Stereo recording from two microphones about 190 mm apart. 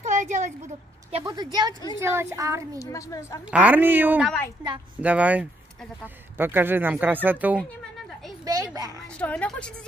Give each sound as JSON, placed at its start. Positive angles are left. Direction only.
{"t": 0.0, "sound": "a sound", "side_deg": -40}
{"t": 1.2, "sound": "a woman's voice", "side_deg": -20}
{"t": 2.8, "sound": "a woman's voice", "side_deg": 15}
{"t": 3.5, "sound": "speech", "side_deg": -10}
{"t": 8.5, "sound": "a child's voice", "side_deg": -20}
{"t": 9.2, "sound": "a woman's voice", "side_deg": 5}